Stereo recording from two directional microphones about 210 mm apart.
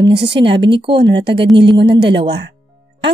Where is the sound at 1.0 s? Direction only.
55° right (ahead or behind).